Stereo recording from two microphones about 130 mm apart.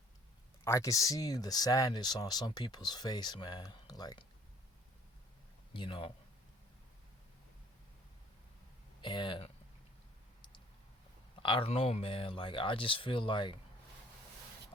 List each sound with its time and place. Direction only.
0.6 s speech: 20° left (ahead or behind)
5.7 s speech: 40° left (ahead or behind)
9.0 s speech: 35° left (ahead or behind)
11.4 s speech: 45° left (ahead or behind)